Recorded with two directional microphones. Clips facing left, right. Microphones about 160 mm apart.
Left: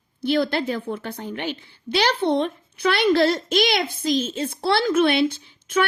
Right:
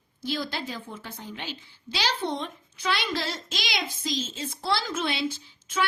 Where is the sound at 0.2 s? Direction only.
65° left (ahead or behind).